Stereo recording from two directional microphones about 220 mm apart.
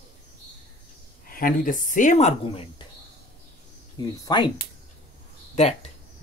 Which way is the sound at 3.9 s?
15° left (ahead or behind).